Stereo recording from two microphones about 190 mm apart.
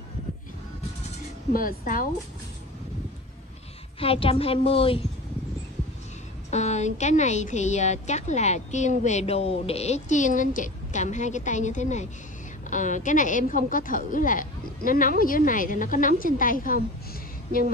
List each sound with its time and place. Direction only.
1.5 s a woman's voice: 50° left (ahead or behind)
4.0 s a woman's voice: 30° left (ahead or behind)
6.5 s a woman's voice: 35° left (ahead or behind)